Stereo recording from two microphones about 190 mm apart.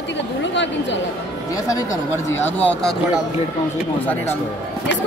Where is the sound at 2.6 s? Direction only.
5° left (ahead or behind).